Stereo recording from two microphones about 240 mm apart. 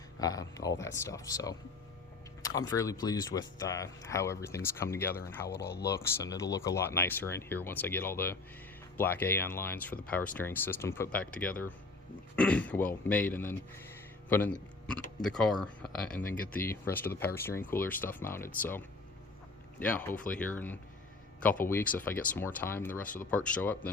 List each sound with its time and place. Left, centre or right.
0.2 s speech: centre
5.5 s speech: left
5.9 s speech: centre
16.2 s speech: left
16.6 s speech: centre
19.8 s speech: centre